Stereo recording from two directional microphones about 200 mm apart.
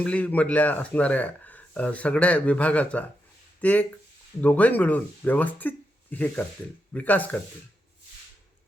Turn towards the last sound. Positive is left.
turn(degrees=10)  # may be behind; listen again after turning